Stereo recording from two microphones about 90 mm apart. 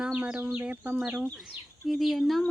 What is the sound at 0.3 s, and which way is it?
Speech, 25° right (ahead or behind).